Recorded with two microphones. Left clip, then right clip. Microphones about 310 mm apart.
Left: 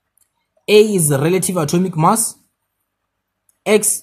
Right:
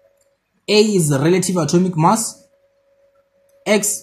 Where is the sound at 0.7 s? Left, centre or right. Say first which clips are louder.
Left 3 dB; left.